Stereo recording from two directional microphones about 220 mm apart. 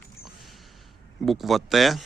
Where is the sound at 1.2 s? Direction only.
Centre (ahead or behind).